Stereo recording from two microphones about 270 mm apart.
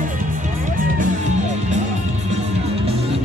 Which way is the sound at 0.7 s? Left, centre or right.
Right.